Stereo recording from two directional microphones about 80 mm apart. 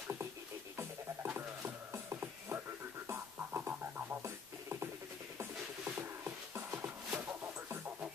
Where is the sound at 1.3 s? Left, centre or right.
Right.